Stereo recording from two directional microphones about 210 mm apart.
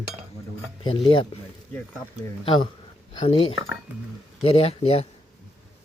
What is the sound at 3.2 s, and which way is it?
Cutlery, 25° left (ahead or behind).